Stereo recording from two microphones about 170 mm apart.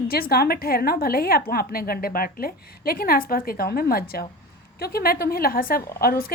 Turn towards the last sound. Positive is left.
turn(degrees=60)  # may be behind; listen again after turning